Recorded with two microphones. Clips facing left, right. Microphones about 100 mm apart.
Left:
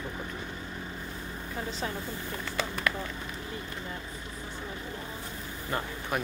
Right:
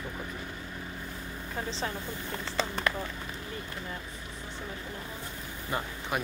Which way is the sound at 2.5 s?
30° right (ahead or behind).